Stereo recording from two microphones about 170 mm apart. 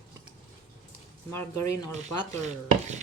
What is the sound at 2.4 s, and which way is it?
Chopping, 40° right (ahead or behind).